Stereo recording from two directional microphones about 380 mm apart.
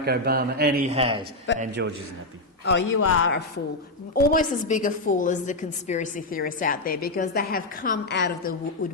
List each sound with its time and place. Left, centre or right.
0.0 s a man's voice: right
2.9 s a man's voice: left
4.1 s a woman's voice: left